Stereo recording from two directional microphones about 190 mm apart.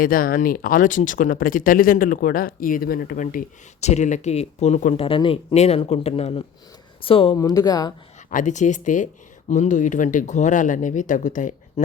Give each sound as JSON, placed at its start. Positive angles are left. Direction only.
{"t": 0.0, "sound": "speech", "side_deg": 50}
{"t": 5.0, "sound": "speech", "side_deg": 25}
{"t": 7.3, "sound": "speech", "side_deg": 20}
{"t": 8.3, "sound": "speech", "side_deg": 40}